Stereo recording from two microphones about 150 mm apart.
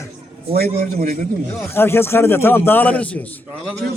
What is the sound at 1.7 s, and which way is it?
A man's voice, 15° left (ahead or behind).